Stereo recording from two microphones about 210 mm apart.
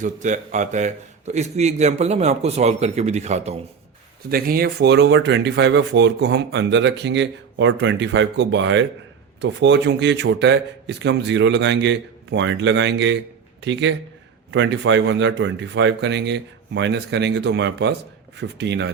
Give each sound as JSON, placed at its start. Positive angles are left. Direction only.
{"t": 0.0, "sound": "a man's voice", "side_deg": -35}
{"t": 4.3, "sound": "speech", "side_deg": -45}